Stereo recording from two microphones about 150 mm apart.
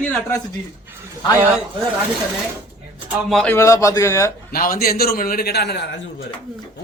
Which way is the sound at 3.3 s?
5° left (ahead or behind).